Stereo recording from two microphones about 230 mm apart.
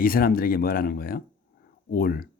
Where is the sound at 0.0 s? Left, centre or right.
Left.